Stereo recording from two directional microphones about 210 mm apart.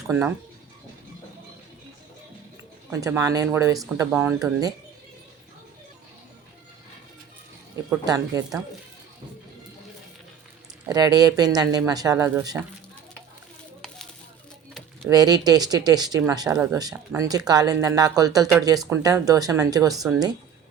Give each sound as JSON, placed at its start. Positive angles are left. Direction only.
{"t": 0.1, "sound": "speech", "side_deg": -10}
{"t": 2.9, "sound": "speech", "side_deg": -15}
{"t": 8.0, "sound": "speech", "side_deg": -15}
{"t": 10.8, "sound": "speech", "side_deg": -20}
{"t": 14.7, "sound": "a sound", "side_deg": 5}
{"t": 15.1, "sound": "speech", "side_deg": -20}